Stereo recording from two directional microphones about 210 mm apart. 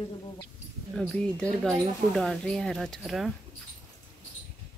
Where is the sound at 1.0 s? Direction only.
5° left (ahead or behind).